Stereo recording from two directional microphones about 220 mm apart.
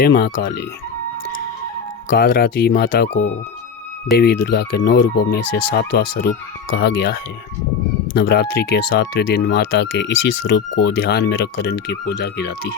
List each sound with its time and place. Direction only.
0.0 s speech: 45° left (ahead or behind)
2.1 s speech: 40° left (ahead or behind)